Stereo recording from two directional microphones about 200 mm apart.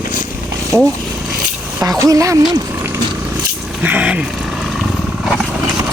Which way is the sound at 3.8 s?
5° right (ahead or behind).